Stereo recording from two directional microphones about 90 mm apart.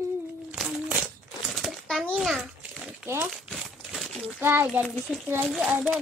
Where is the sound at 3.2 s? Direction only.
Centre (ahead or behind).